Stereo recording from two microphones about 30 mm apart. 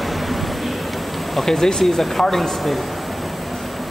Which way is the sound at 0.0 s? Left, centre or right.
Centre.